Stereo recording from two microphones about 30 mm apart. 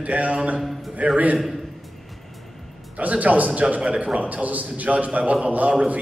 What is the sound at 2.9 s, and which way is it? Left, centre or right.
A man's voice, right.